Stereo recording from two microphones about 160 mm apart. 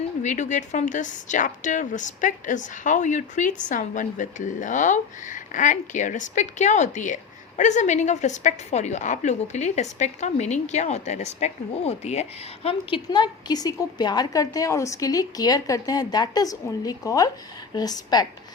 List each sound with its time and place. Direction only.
0.2 s a woman's voice: 50° left (ahead or behind)
12.6 s a woman's voice: 30° left (ahead or behind)